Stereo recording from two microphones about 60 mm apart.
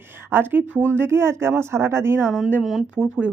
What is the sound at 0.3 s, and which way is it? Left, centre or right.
Speech, right.